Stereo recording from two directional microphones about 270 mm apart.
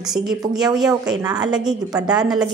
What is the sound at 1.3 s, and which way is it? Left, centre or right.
Speech, centre.